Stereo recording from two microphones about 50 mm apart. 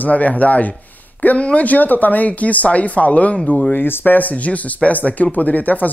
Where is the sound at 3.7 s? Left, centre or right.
Left.